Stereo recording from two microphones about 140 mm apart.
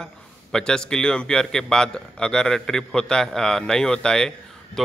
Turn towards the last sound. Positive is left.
turn(degrees=0)  # may be behind; listen again after turning